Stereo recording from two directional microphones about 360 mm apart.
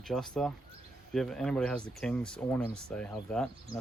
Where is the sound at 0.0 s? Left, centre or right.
Centre.